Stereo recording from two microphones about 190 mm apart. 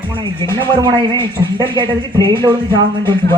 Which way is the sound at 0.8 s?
25° right (ahead or behind).